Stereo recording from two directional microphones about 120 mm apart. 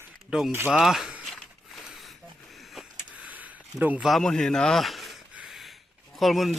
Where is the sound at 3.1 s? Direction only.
10° right (ahead or behind).